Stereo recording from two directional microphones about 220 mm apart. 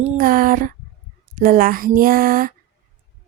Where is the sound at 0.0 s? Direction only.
35° right (ahead or behind).